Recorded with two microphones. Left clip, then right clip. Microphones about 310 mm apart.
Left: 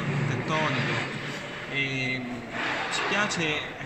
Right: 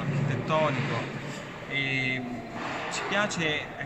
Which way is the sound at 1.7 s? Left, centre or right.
Centre.